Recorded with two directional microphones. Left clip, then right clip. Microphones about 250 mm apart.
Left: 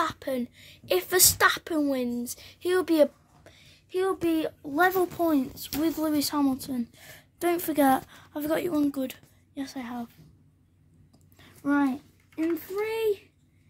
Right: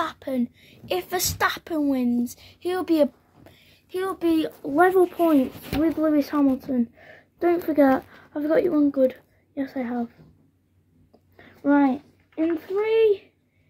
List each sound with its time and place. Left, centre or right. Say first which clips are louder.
0.0 s speech: right 2 dB; centre
4.7 s speech: right 6 dB; left
5.8 s speech: right 5 dB; left
11.3 s a child's voice: right 6 dB; left